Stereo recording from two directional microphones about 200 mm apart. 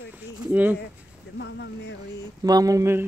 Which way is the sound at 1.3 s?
60° left (ahead or behind).